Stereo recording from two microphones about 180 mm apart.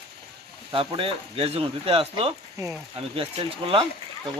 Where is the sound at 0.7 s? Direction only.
30° right (ahead or behind).